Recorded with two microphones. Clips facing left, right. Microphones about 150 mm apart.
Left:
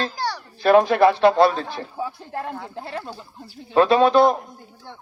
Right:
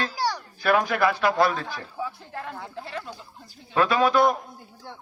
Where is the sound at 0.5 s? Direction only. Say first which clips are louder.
Left 9 dB; 25° left (ahead or behind).